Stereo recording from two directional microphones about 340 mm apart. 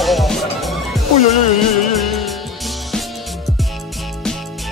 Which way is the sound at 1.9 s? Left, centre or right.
Centre.